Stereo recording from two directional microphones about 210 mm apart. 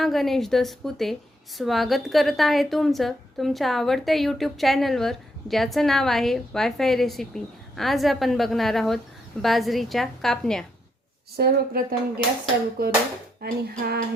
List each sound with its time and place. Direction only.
0.0 s a woman's voice: centre (ahead or behind)
11.3 s speech: 45° right (ahead or behind)
13.4 s speech: 50° right (ahead or behind)